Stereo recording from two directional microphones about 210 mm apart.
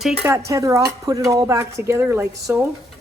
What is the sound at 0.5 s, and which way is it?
Speech, 15° right (ahead or behind).